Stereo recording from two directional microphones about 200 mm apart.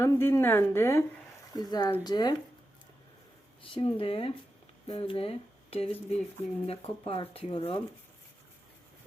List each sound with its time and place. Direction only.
0.0 s a woman's voice: 15° left (ahead or behind)
3.6 s speech: 25° left (ahead or behind)